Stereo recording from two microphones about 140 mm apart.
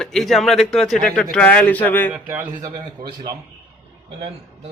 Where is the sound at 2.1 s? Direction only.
10° right (ahead or behind).